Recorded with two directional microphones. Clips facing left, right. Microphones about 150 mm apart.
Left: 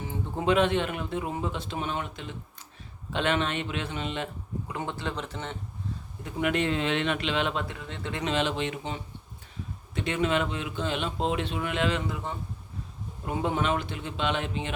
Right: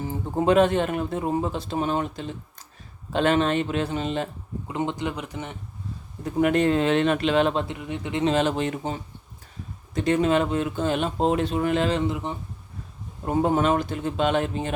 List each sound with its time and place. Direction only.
0.0 s a man's voice: 40° right (ahead or behind)
4.7 s speech: 20° right (ahead or behind)
6.2 s a man's voice: 40° right (ahead or behind)
7.7 s speech: 15° right (ahead or behind)
8.2 s a man's voice: 40° right (ahead or behind)
12.1 s speech: 20° right (ahead or behind)
13.2 s speech: 40° right (ahead or behind)